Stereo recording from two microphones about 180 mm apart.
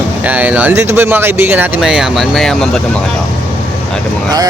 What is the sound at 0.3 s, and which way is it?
Speech, 10° right (ahead or behind).